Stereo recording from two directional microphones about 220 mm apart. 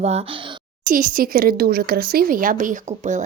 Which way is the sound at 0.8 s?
40° right (ahead or behind).